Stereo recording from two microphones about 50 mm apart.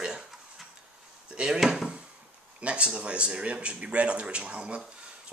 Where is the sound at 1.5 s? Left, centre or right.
Centre.